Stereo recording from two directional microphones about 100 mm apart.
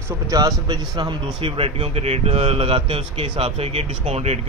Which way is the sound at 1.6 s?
80° right.